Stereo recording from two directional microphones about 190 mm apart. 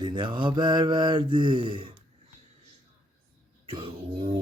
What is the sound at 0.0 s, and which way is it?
Speech, 25° right (ahead or behind).